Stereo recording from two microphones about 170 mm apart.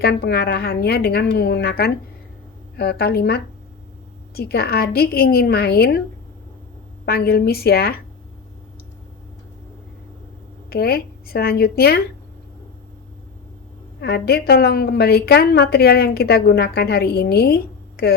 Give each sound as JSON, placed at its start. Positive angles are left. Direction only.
{"t": 0.0, "sound": "a woman's voice", "side_deg": 70}
{"t": 7.0, "sound": "a woman's voice", "side_deg": 65}
{"t": 10.7, "sound": "a woman's voice", "side_deg": 65}
{"t": 14.0, "sound": "a woman's voice", "side_deg": 70}